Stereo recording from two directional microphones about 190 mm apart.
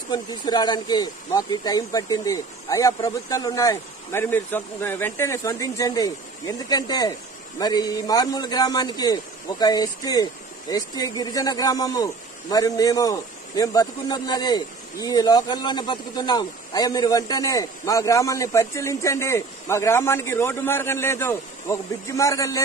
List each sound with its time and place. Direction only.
0.1 s a man's voice: 20° left (ahead or behind)